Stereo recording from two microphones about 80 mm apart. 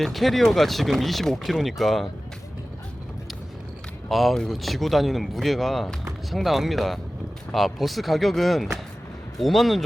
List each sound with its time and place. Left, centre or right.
0.0 s speech: centre
4.1 s speech: centre